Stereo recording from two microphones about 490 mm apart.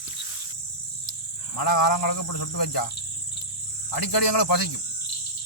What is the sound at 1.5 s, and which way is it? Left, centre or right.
Speech, left.